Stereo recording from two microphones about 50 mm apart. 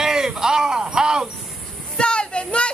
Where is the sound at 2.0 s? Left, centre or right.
Centre.